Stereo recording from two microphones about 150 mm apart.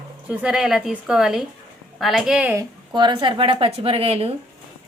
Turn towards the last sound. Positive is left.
turn(degrees=-40)  # may be behind; listen again after turning